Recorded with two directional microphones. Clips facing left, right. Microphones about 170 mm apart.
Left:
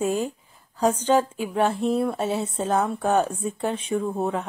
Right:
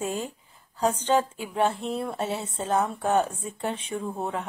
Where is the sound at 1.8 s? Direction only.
15° left (ahead or behind).